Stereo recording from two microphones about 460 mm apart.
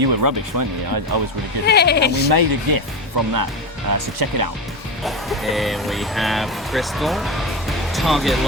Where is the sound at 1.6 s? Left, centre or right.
Left.